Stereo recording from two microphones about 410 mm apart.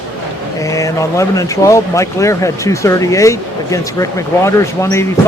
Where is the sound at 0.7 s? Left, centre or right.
Centre.